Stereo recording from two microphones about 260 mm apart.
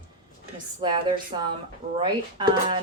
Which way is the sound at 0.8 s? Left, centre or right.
Centre.